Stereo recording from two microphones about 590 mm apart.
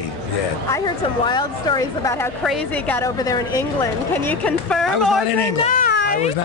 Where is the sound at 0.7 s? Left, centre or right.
Centre.